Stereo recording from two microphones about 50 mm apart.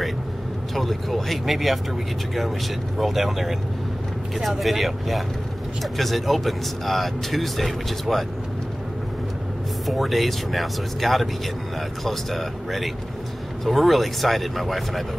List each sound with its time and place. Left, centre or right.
0.7 s speech: centre
3.0 s speech: centre
9.8 s speech: centre